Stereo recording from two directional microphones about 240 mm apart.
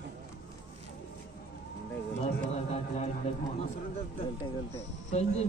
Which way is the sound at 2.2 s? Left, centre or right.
Left.